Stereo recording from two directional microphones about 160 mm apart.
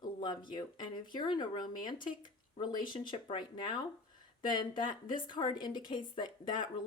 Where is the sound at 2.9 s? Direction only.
30° left (ahead or behind).